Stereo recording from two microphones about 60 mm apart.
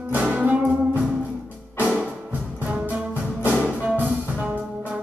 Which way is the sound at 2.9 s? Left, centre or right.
Right.